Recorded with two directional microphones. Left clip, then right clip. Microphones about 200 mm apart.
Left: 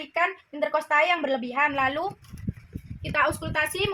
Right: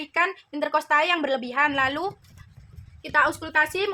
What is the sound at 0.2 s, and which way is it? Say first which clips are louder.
A woman's voice: right 1 dB; 15° right (ahead or behind).